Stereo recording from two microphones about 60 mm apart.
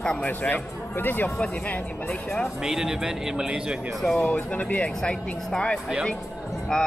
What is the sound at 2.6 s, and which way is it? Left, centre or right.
A man's voice, centre.